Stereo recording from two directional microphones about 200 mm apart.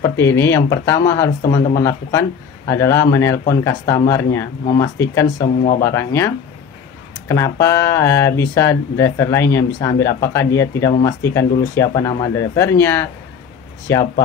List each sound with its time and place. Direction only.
0.0 s speech: 15° left (ahead or behind)
5.4 s speech: 35° left (ahead or behind)
5.8 s speech: 15° left (ahead or behind)